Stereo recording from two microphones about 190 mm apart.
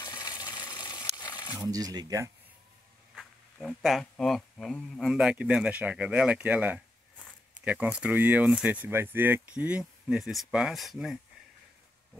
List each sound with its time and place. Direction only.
0.0 s a sound: 20° left (ahead or behind)
1.6 s speech: 20° right (ahead or behind)
3.2 s speech: centre (ahead or behind)